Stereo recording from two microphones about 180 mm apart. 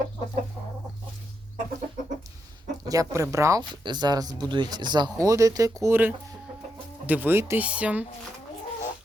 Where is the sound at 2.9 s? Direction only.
20° right (ahead or behind).